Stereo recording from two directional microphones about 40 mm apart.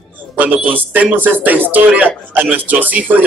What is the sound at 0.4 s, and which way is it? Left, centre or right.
A man's voice, right.